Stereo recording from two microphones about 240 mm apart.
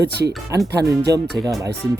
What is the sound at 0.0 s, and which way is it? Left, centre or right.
Speech, right.